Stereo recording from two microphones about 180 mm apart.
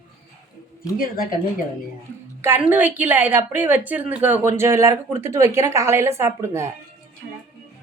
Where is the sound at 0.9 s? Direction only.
55° left (ahead or behind).